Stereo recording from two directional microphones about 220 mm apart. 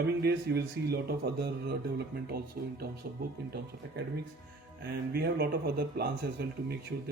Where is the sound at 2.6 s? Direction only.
45° right (ahead or behind).